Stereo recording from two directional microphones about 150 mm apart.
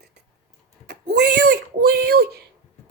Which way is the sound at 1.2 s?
90° right.